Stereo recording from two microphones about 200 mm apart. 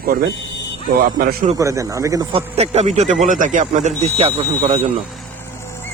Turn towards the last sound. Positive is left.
turn(degrees=-30)  # may be behind; listen again after turning